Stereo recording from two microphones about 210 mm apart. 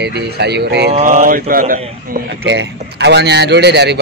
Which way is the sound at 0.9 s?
40° right (ahead or behind).